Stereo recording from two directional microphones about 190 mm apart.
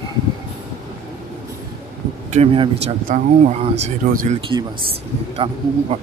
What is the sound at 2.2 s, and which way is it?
Speech, 30° right (ahead or behind).